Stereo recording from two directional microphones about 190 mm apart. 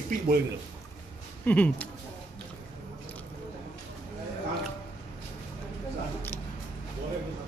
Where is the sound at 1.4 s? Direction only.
10° left (ahead or behind).